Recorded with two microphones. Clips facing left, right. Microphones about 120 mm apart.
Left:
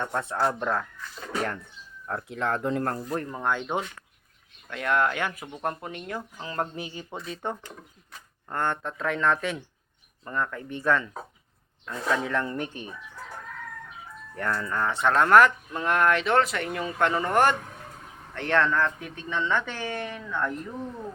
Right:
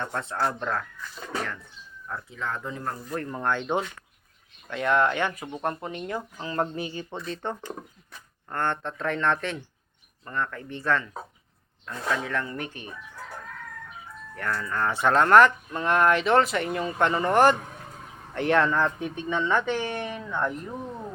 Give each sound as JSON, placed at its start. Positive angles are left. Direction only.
{"t": 0.0, "sound": "speech", "side_deg": 15}
{"t": 2.2, "sound": "speech", "side_deg": 65}
{"t": 3.2, "sound": "speech", "side_deg": 5}
{"t": 14.3, "sound": "speech", "side_deg": 25}
{"t": 14.8, "sound": "speech", "side_deg": -5}
{"t": 18.8, "sound": "speech", "side_deg": -25}